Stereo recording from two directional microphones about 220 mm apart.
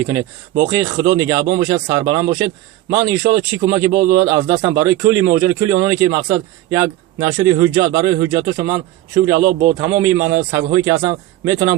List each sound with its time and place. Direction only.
0.0 s speech: 15° right (ahead or behind)
9.4 s a man's voice: 40° right (ahead or behind)
9.7 s speech: 10° right (ahead or behind)